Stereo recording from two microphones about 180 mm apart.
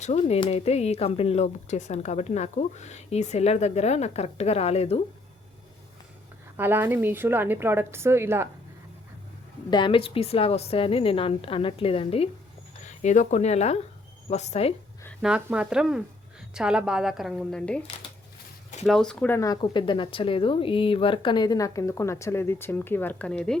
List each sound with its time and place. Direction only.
0.0 s speech: 40° left (ahead or behind)
6.6 s a woman's voice: 10° right (ahead or behind)
9.6 s speech: 25° left (ahead or behind)
15.2 s a woman's voice: 5° right (ahead or behind)
18.9 s speech: centre (ahead or behind)